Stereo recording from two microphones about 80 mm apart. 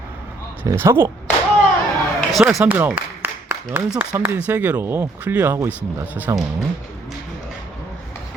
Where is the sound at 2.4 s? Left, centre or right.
Centre.